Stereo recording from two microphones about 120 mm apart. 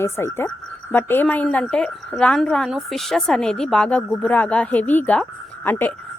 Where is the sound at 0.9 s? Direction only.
15° left (ahead or behind).